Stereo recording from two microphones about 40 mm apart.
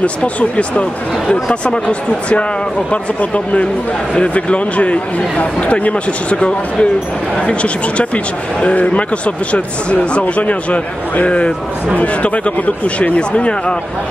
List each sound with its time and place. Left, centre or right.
0.0 s speech: left